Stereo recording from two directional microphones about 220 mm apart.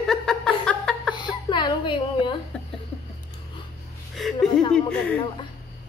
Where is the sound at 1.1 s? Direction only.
20° left (ahead or behind).